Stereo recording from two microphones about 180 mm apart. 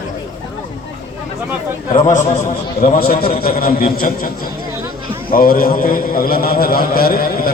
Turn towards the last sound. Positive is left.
turn(degrees=55)  # may be behind; listen again after turning